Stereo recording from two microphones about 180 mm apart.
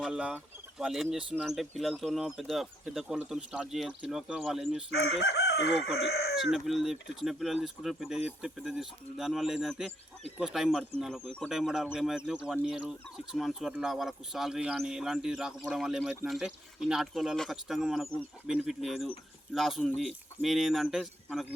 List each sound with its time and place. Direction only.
0.0 s speech: 5° right (ahead or behind)
4.9 s chicken: 65° left (ahead or behind)
6.0 s speech: 65° left (ahead or behind)
6.3 s speech: centre (ahead or behind)